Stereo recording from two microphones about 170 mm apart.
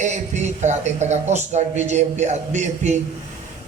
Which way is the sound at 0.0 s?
45° right (ahead or behind).